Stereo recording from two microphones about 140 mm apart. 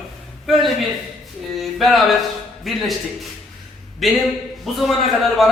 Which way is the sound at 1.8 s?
Centre (ahead or behind).